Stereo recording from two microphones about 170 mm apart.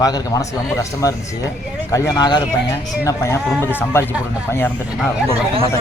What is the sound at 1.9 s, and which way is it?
A man's voice, 20° left (ahead or behind).